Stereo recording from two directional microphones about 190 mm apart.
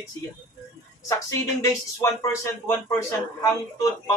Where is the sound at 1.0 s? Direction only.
15° left (ahead or behind).